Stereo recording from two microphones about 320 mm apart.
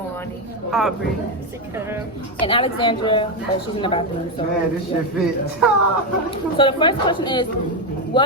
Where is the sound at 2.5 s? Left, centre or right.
Centre.